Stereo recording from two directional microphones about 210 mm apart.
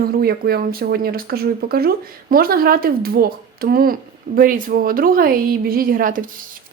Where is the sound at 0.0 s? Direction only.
45° right (ahead or behind).